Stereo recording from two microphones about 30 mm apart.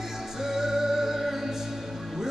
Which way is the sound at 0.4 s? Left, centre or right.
Centre.